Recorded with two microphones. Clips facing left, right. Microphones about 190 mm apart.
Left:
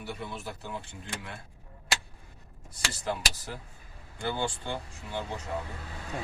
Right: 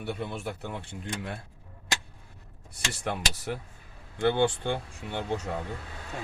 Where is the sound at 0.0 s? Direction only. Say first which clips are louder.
Right 5 dB; 60° right (ahead or behind).